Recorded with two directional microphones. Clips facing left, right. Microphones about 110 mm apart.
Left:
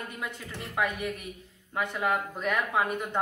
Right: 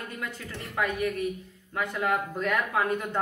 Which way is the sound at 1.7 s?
20° left (ahead or behind).